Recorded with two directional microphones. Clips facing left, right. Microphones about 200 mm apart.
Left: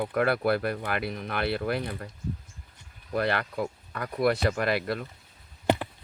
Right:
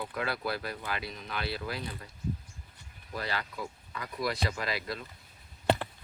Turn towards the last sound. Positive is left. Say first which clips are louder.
# left 3 dB
turn(degrees=15)  # may be behind; listen again after turning